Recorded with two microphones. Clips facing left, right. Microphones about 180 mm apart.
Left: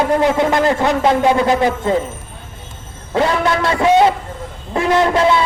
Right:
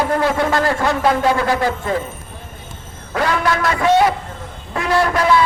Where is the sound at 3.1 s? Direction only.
25° left (ahead or behind).